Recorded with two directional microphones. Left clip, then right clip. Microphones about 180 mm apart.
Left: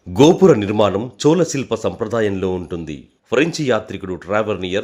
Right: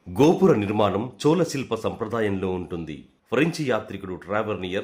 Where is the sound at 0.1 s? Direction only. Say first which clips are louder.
Left 7 dB; 25° left (ahead or behind).